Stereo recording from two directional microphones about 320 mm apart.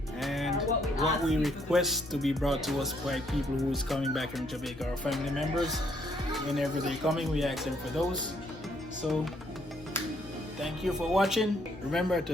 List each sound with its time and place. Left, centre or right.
0.2 s speech: centre
10.6 s speech: centre